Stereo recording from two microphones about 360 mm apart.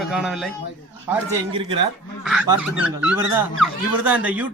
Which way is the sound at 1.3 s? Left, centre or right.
Centre.